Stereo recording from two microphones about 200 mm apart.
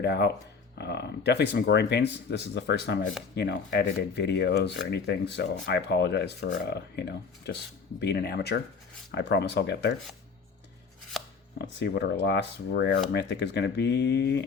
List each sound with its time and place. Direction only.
0.0 s speech: 55° left (ahead or behind)
11.1 s chopping: centre (ahead or behind)
11.5 s speech: 60° left (ahead or behind)